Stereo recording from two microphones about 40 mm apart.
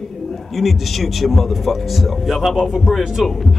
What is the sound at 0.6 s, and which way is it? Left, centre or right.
Speech, centre.